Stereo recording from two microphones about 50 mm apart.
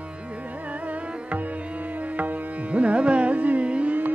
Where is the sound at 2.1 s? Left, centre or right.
Right.